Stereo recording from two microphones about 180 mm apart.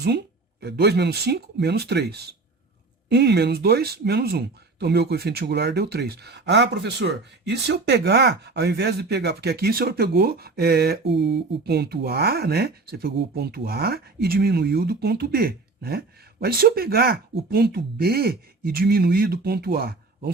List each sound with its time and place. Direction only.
0.0 s speech: 65° right (ahead or behind)